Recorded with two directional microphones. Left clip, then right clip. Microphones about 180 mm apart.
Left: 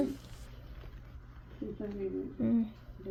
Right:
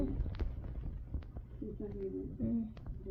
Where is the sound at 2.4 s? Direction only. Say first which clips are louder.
Left 7 dB; 40° left (ahead or behind).